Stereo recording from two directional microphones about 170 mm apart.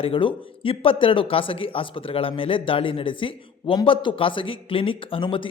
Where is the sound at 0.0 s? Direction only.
30° left (ahead or behind).